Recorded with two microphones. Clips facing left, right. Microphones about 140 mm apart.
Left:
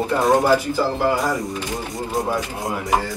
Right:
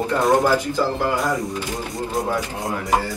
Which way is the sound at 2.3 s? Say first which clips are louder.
Even; 20° left (ahead or behind).